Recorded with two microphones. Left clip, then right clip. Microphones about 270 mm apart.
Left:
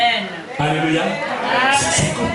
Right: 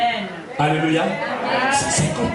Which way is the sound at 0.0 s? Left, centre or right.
Centre.